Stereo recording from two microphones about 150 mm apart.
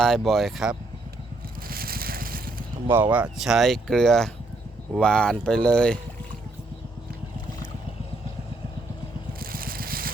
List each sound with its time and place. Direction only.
0.0 s speech: centre (ahead or behind)
1.6 s a sound: 80° right
2.9 s speech: 10° right (ahead or behind); by 6.0 s 5° left (ahead or behind)
9.4 s vehicle: 75° right (ahead or behind)